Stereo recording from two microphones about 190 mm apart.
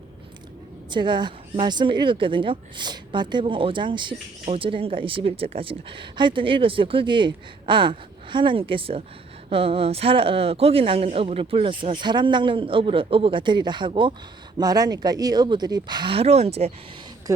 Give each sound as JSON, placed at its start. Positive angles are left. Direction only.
{"t": 0.9, "sound": "speech", "side_deg": -25}
{"t": 17.3, "sound": "speech", "side_deg": -15}